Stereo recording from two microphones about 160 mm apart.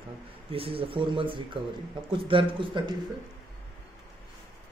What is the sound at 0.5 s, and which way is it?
Speech, 35° right (ahead or behind).